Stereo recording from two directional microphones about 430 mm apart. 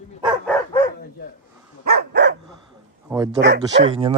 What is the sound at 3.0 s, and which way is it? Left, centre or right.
Bow-wow, centre.